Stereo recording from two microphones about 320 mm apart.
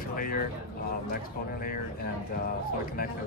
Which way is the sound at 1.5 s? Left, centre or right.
Left.